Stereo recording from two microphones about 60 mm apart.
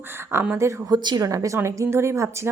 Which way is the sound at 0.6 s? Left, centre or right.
Right.